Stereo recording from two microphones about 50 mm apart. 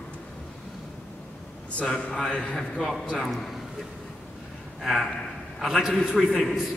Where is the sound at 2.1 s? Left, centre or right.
Centre.